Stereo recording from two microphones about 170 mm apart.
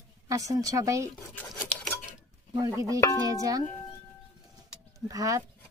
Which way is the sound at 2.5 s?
20° right (ahead or behind).